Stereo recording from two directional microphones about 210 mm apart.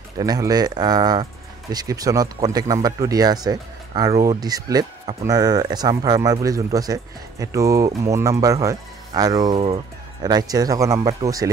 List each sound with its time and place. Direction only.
0.2 s speech: 15° right (ahead or behind)